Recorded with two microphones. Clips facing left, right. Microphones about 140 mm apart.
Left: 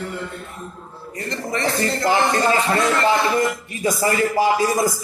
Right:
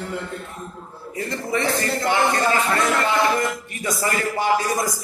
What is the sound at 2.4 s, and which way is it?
A man's voice, 25° left (ahead or behind).